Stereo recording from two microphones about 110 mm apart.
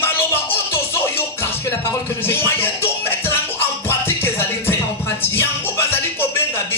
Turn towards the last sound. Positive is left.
turn(degrees=20)  # may be behind; listen again after turning